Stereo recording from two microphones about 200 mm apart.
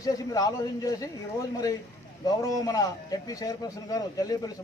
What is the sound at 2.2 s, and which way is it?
A man's voice, 15° left (ahead or behind).